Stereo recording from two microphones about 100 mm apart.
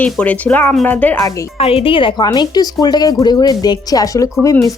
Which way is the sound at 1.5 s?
75° left (ahead or behind).